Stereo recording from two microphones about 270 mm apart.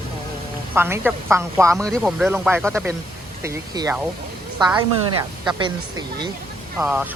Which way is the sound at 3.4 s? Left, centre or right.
Centre.